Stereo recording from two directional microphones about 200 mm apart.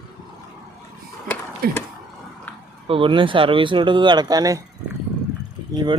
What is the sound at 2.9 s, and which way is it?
Speech, 25° right (ahead or behind).